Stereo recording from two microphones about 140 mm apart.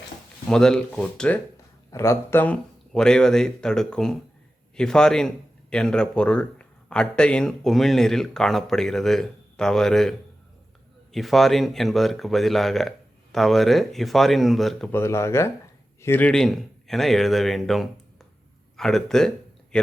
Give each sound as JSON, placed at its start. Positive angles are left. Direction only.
{"t": 0.4, "sound": "speech", "side_deg": 5}
{"t": 1.9, "sound": "speech", "side_deg": 20}
{"t": 14.9, "sound": "speech", "side_deg": 20}
{"t": 19.7, "sound": "a sound", "side_deg": 5}